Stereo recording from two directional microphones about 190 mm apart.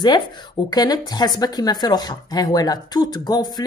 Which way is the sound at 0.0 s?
20° left (ahead or behind).